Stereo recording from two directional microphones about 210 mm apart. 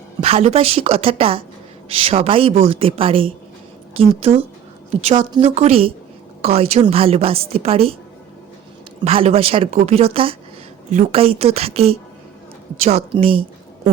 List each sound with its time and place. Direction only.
0.2 s a woman's voice: 30° right (ahead or behind)
9.0 s a woman's voice: 25° right (ahead or behind)